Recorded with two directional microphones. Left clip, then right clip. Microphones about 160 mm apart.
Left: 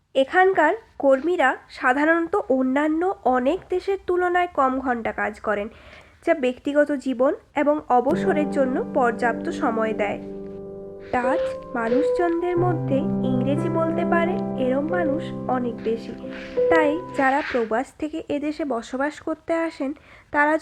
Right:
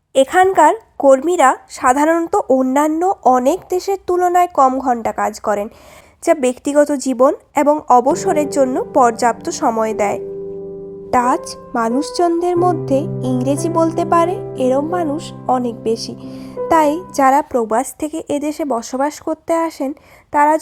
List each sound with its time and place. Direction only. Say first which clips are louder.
0.1 s a woman's voice: right 6 dB; 45° right (ahead or behind); by 16.1 s 65° right (ahead or behind)
16.6 s a woman's voice: right 6 dB; 50° right (ahead or behind)